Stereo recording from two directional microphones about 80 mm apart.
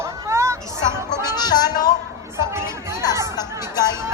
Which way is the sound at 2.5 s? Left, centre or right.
Right.